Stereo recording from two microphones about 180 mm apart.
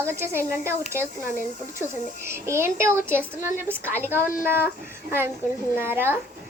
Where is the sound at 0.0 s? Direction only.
15° right (ahead or behind).